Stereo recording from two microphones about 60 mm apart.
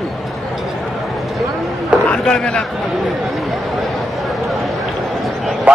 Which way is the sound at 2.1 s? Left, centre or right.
Centre.